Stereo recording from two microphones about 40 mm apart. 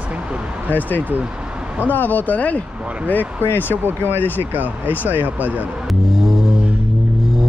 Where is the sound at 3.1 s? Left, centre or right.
Left.